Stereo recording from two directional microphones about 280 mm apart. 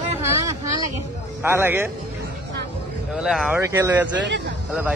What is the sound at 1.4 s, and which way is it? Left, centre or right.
Speech, centre.